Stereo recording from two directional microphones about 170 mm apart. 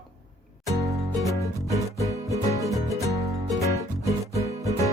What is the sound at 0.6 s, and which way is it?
Music, 20° right (ahead or behind).